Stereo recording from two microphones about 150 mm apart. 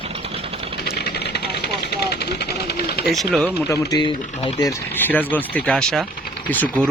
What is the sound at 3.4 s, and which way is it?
Speech, 25° left (ahead or behind).